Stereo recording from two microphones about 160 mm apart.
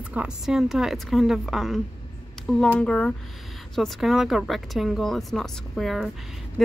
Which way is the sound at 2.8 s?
5° left (ahead or behind).